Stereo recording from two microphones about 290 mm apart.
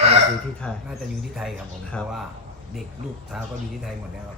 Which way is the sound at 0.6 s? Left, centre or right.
Centre.